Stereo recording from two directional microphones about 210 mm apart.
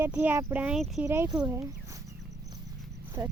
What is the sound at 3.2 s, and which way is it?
Speech, 15° right (ahead or behind).